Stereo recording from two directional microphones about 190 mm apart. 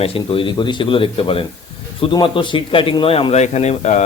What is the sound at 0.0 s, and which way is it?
A man's voice, 30° left (ahead or behind).